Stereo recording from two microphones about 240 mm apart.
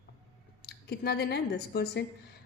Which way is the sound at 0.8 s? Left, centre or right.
Left.